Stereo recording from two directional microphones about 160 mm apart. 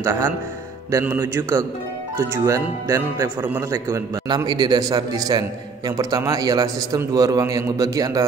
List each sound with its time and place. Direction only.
0.0 s speech: 20° right (ahead or behind)